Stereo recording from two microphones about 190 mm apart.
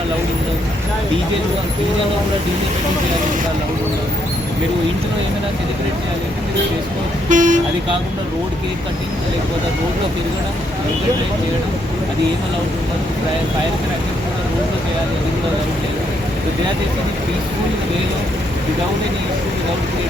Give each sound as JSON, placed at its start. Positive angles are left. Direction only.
{"t": 7.3, "sound": "speech", "side_deg": -40}